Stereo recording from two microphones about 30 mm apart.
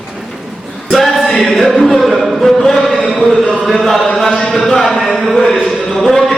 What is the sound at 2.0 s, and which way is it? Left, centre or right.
Chant, centre.